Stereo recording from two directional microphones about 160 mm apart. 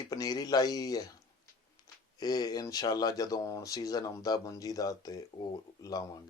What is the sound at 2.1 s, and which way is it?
Speech, 25° left (ahead or behind).